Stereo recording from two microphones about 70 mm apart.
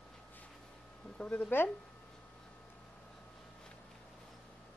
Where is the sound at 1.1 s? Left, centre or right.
Centre.